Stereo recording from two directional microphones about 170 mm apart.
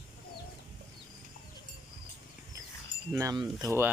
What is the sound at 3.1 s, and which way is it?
Speech, 20° right (ahead or behind).